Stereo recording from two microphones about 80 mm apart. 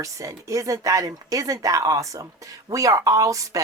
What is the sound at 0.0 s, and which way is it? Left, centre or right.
Speech, right.